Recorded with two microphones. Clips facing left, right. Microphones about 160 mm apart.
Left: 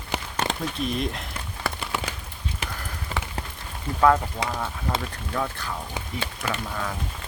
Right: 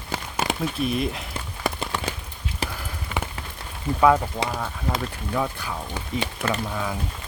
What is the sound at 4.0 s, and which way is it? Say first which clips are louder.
Speech: right 1 dB; 10° right (ahead or behind).